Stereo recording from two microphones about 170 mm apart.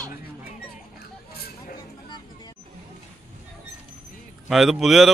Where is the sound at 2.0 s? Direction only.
25° left (ahead or behind).